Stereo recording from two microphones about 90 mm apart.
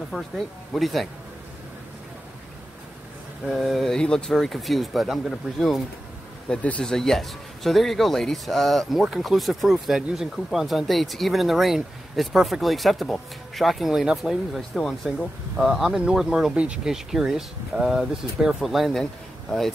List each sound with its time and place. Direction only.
0.1 s speech: 10° right (ahead or behind)
0.7 s a man's voice: centre (ahead or behind)
3.4 s a man's voice: centre (ahead or behind)
6.5 s speech: 15° left (ahead or behind)
6.8 s a man's voice: 5° left (ahead or behind)